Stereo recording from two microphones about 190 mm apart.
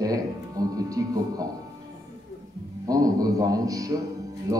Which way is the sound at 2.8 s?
20° right (ahead or behind).